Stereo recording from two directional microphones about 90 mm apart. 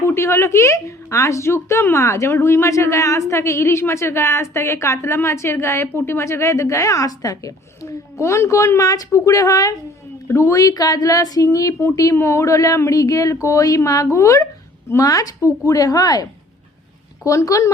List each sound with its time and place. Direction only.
0.1 s a woman's voice: 30° left (ahead or behind); by 16.2 s 45° left (ahead or behind)
17.2 s speech: 40° left (ahead or behind)